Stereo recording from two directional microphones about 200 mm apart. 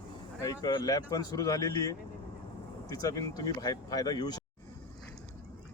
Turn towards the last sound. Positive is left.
turn(degrees=20)  # may be behind; listen again after turning